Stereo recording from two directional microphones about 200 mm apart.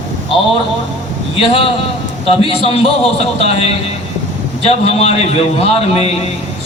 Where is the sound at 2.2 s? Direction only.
30° left (ahead or behind).